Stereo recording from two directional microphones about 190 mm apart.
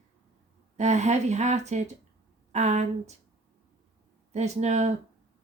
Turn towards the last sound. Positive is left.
turn(degrees=-35)  # may be behind; listen again after turning